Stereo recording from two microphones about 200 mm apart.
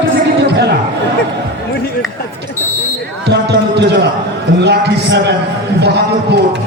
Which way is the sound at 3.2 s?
60° right (ahead or behind).